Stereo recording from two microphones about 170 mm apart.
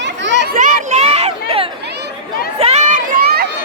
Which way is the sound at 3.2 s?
65° right (ahead or behind).